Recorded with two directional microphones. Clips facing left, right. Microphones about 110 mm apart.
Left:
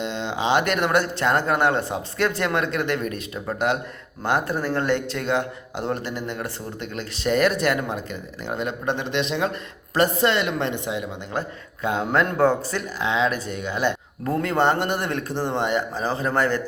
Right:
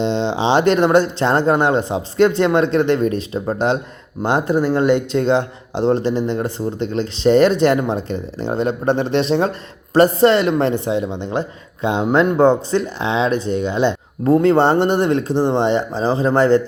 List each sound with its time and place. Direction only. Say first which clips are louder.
0.0 s speech: right 8 dB; 30° right (ahead or behind)